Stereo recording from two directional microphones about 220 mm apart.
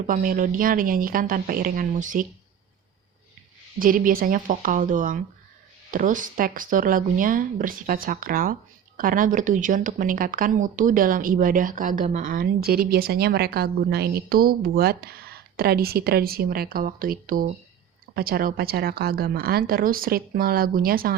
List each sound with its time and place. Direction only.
0.1 s speech: 40° right (ahead or behind)
3.8 s a woman's voice: 40° right (ahead or behind)